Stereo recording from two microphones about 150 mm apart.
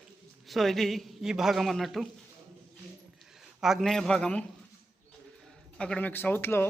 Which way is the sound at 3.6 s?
Centre (ahead or behind).